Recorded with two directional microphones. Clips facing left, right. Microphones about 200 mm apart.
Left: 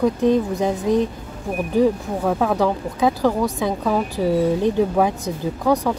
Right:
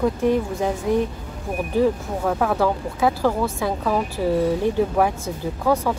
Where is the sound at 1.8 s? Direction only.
10° left (ahead or behind).